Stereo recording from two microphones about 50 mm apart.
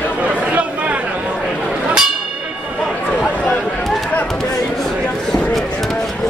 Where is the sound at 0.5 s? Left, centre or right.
Right.